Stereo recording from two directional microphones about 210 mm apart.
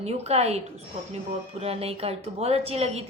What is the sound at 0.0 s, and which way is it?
Speech, 30° right (ahead or behind).